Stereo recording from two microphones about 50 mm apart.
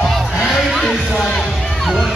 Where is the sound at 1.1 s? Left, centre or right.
Centre.